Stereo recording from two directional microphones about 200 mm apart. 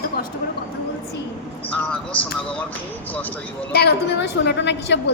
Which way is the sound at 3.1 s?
10° left (ahead or behind).